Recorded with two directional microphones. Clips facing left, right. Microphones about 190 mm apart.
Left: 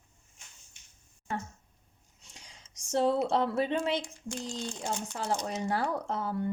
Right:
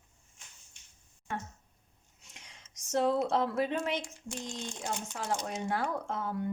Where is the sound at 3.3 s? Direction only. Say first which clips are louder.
Left 2 dB; 30° left (ahead or behind).